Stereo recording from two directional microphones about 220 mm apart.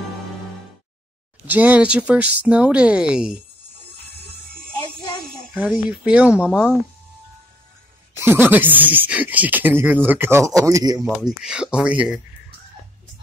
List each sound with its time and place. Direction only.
1.5 s speech: 5° right (ahead or behind)
5.5 s speech: 5° right (ahead or behind)
8.2 s speech: 10° right (ahead or behind)
11.1 s speech: centre (ahead or behind)